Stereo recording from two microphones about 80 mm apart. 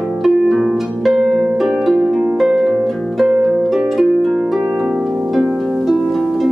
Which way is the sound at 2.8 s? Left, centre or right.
Centre.